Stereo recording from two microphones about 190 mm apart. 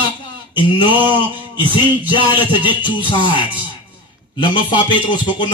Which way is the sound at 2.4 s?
25° left (ahead or behind).